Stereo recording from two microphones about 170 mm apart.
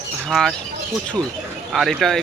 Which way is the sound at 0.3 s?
Centre (ahead or behind).